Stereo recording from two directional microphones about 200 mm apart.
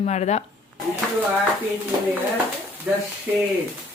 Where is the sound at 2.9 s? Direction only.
5° right (ahead or behind).